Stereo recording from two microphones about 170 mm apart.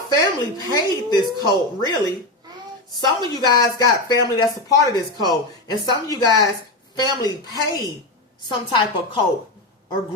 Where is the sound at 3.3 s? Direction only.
25° left (ahead or behind).